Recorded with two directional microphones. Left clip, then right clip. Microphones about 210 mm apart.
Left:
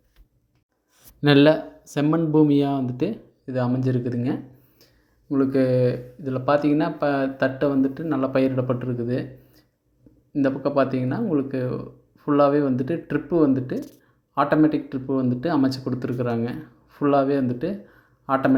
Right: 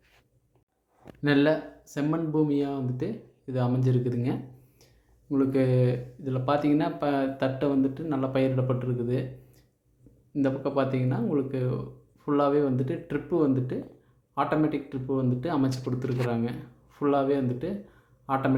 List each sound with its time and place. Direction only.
1.2 s speech: 35° left (ahead or behind)
3.4 s speech: 20° left (ahead or behind)